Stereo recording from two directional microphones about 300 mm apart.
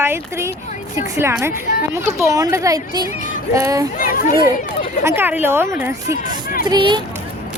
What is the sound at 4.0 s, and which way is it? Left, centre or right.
Speech, left.